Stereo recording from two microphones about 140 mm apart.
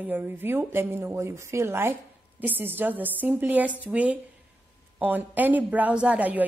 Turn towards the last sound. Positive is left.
turn(degrees=-10)  # may be behind; listen again after turning